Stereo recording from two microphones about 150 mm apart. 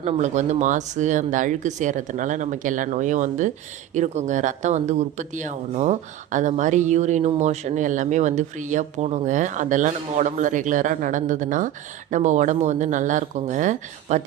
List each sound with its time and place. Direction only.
0.0 s speech: 50° right (ahead or behind)